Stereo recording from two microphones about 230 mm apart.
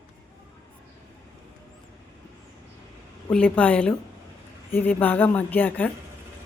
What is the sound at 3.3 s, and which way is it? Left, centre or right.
A woman's voice, centre.